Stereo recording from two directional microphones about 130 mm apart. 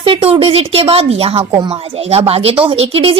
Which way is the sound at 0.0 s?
45° right (ahead or behind).